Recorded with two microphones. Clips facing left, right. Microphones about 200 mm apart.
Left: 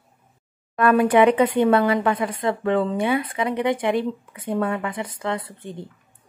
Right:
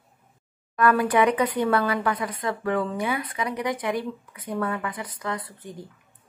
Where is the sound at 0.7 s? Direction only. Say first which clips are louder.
Left 4 dB; 25° left (ahead or behind).